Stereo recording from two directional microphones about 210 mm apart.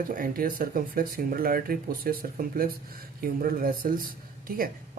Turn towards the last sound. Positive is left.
turn(degrees=-40)  # may be behind; listen again after turning